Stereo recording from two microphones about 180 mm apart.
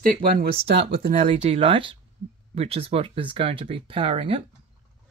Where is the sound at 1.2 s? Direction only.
30° right (ahead or behind).